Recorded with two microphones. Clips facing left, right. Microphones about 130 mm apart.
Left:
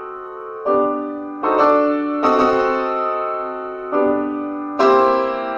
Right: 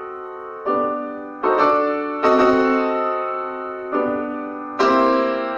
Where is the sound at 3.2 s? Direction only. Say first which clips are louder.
Left 2 dB; 25° left (ahead or behind).